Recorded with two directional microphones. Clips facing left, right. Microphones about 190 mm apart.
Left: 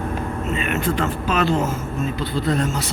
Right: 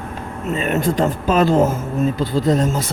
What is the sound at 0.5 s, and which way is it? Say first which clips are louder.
Speech: right 5 dB; 40° right (ahead or behind).